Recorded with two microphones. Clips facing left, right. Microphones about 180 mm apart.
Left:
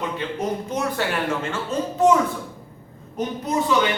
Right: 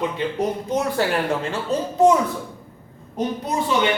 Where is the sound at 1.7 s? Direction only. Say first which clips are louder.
Right 2 dB; 35° right (ahead or behind).